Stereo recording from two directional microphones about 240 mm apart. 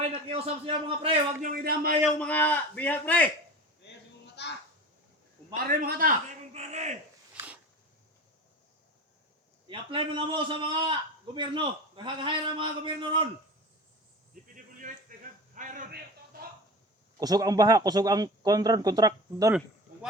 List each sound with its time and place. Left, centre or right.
0.0 s a man's voice: right
1.5 s speech: right
2.0 s a man's voice: centre
4.4 s a sound: left
5.8 s a man's voice: right
7.3 s a sound: centre
9.6 s a man's voice: right
14.5 s a sound: right
17.2 s speech: centre